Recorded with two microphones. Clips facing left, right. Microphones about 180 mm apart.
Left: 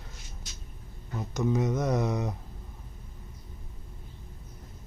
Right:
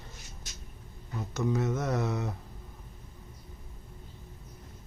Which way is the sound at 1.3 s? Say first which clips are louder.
Left 2 dB; 15° left (ahead or behind).